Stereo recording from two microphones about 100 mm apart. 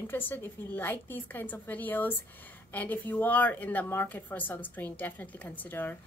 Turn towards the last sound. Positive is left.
turn(degrees=20)  # may be behind; listen again after turning